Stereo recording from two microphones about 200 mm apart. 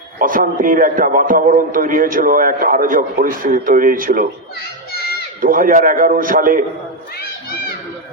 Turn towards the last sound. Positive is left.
turn(degrees=50)  # may be behind; listen again after turning